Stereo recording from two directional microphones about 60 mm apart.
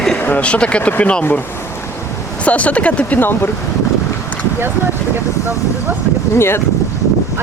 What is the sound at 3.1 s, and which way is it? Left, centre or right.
Speech, left.